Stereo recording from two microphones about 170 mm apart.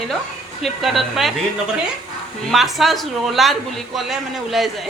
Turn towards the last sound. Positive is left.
turn(degrees=0)  # may be behind; listen again after turning